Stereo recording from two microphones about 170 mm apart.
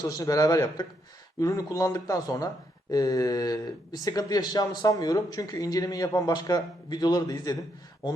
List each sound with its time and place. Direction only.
0.0 s speech: 20° left (ahead or behind)